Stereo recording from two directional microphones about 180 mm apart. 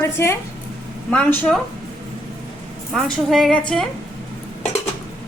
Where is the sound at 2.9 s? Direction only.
Centre (ahead or behind).